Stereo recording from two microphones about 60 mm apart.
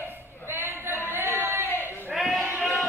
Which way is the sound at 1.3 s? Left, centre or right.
Right.